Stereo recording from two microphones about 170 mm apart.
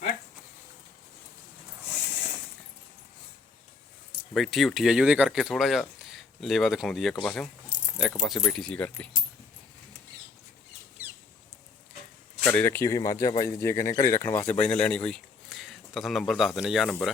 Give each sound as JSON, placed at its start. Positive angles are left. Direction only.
{"t": 4.4, "sound": "speech", "side_deg": 0}
{"t": 11.0, "sound": "a sound", "side_deg": -10}
{"t": 12.5, "sound": "speech", "side_deg": 10}